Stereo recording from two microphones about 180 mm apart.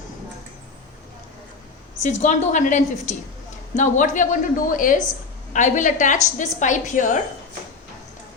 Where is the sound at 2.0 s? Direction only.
40° left (ahead or behind).